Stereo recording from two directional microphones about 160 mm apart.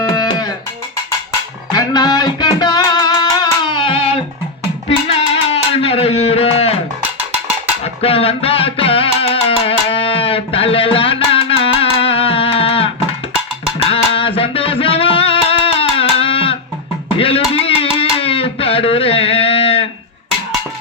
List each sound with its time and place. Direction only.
0.0 s music: 25° left (ahead or behind)
1.7 s music: 25° left (ahead or behind)
8.0 s music: 35° left (ahead or behind)